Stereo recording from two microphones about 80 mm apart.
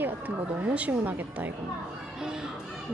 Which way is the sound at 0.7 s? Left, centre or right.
Centre.